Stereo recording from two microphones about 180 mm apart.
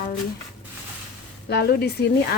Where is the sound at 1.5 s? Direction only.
60° left (ahead or behind).